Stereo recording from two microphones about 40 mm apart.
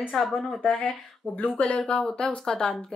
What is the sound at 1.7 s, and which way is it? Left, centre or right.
A woman's voice, left.